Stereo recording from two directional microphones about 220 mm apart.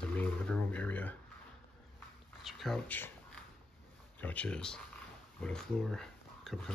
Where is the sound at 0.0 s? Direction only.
5° left (ahead or behind).